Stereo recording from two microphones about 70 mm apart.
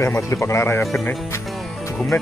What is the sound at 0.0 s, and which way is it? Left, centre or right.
Speech, left.